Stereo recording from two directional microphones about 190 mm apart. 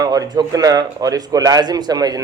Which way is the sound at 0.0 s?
20° right (ahead or behind).